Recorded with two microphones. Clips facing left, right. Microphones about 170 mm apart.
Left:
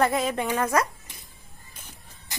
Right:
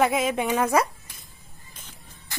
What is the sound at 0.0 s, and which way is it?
Speech, centre (ahead or behind).